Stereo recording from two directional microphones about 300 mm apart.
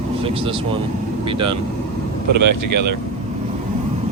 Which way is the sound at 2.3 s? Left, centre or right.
Right.